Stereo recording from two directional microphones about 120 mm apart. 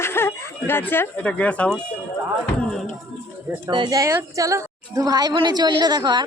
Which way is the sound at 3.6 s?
40° right (ahead or behind).